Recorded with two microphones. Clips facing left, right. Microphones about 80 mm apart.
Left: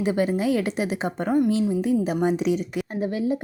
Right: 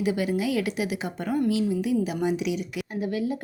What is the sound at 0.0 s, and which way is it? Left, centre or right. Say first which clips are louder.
A woman's voice: left 3 dB; left.